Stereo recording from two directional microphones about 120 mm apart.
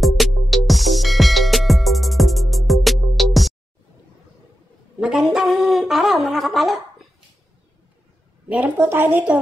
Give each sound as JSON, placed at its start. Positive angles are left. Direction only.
{"t": 0.0, "sound": "music", "side_deg": 0}
{"t": 5.0, "sound": "a sound", "side_deg": -5}
{"t": 8.5, "sound": "a woman's voice", "side_deg": -15}